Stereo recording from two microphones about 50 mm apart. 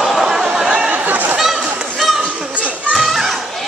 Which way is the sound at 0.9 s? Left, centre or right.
Right.